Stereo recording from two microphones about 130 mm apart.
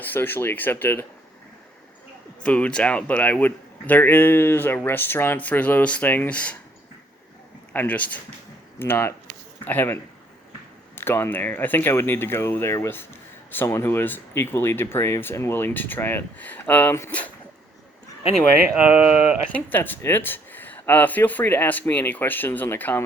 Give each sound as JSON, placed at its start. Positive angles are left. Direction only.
{"t": 0.0, "sound": "speech", "side_deg": 15}
{"t": 2.4, "sound": "speech", "side_deg": 10}
{"t": 7.7, "sound": "speech", "side_deg": 10}
{"t": 18.8, "sound": "speech", "side_deg": -10}
{"t": 19.5, "sound": "speech", "side_deg": 15}